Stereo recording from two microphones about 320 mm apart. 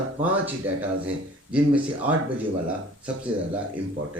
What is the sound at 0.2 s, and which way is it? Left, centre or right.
Speech, centre.